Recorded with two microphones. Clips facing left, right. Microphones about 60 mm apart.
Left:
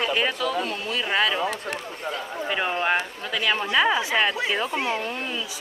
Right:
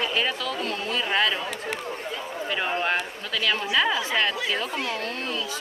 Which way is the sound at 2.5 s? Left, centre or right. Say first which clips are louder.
Left 2 dB; centre.